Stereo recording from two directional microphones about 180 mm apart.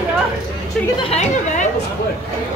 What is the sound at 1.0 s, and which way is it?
Speech, 35° left (ahead or behind).